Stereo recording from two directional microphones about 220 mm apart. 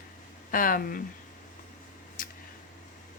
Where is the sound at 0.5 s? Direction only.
40° left (ahead or behind).